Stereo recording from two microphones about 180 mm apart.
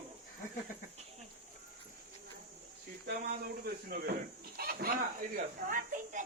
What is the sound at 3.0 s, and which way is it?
A child's voice, 60° right (ahead or behind).